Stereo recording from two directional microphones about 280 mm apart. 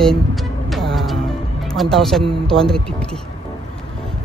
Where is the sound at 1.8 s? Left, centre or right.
Centre.